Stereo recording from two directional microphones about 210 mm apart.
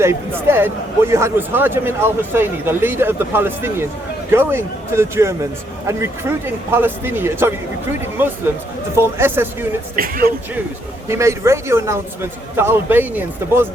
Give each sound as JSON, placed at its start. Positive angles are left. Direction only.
{"t": 0.0, "sound": "a man's voice", "side_deg": -10}
{"t": 9.9, "sound": "music", "side_deg": -45}
{"t": 11.1, "sound": "a man's voice", "side_deg": -15}